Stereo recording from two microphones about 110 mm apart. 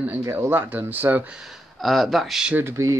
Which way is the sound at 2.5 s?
20° right (ahead or behind).